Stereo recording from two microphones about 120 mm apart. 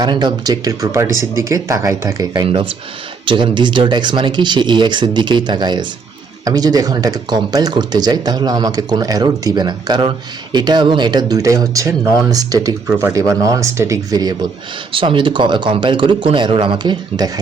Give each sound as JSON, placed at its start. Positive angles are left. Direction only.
{"t": 0.0, "sound": "speech", "side_deg": -35}
{"t": 3.2, "sound": "speech", "side_deg": -45}
{"t": 14.9, "sound": "speech", "side_deg": -45}